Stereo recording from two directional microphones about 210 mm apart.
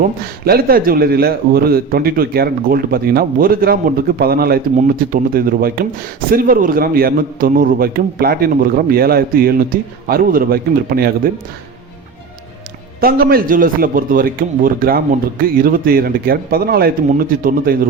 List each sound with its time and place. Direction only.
0.4 s a man's voice: 45° right (ahead or behind)
13.0 s a man's voice: 45° right (ahead or behind)